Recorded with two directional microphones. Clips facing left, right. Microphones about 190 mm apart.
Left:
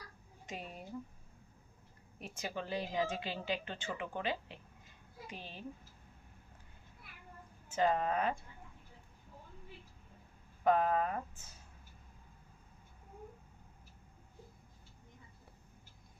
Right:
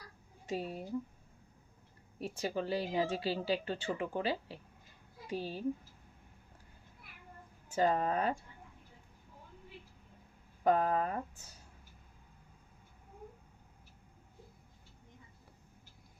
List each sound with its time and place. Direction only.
0.4 s speech: 30° right (ahead or behind)
2.4 s speech: 35° right (ahead or behind)
7.8 s speech: 40° right (ahead or behind)
10.6 s speech: 40° right (ahead or behind)